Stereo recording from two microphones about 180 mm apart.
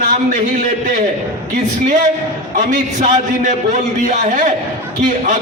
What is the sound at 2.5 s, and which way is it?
A man's voice, 45° right (ahead or behind).